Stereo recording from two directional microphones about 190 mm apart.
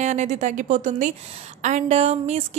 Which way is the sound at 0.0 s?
40° right (ahead or behind).